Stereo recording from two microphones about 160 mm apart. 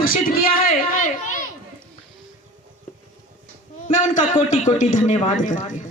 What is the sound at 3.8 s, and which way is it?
A man's voice, 55° left (ahead or behind).